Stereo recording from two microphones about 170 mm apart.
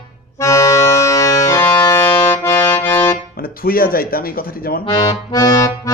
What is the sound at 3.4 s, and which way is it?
Speech, 60° left (ahead or behind).